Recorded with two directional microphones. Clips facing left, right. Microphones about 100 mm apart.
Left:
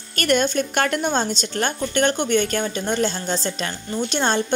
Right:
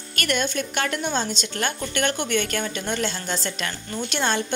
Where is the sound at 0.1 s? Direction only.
40° left (ahead or behind).